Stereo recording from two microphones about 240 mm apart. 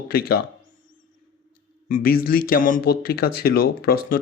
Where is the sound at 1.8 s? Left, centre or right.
Left.